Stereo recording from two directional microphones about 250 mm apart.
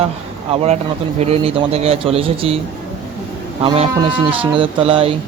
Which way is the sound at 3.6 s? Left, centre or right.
Right.